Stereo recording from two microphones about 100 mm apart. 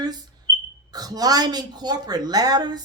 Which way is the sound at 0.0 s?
40° right (ahead or behind).